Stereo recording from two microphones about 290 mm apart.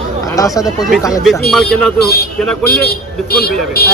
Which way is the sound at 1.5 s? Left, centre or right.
Centre.